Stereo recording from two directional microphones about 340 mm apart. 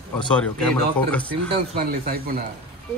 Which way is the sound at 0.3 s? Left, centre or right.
Centre.